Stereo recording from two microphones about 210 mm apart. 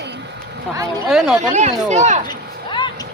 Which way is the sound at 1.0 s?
5° right (ahead or behind).